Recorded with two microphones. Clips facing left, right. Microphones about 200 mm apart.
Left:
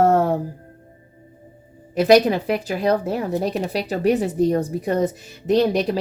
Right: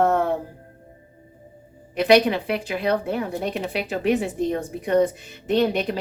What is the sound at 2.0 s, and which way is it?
Speech, 40° left (ahead or behind).